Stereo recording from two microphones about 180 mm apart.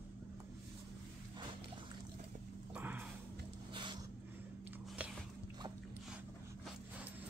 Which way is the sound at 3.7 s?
25° right (ahead or behind).